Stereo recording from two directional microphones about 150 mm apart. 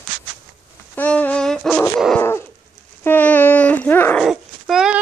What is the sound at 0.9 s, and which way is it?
Dog, 10° left (ahead or behind).